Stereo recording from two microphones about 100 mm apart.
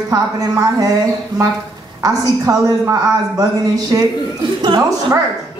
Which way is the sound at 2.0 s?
35° right (ahead or behind).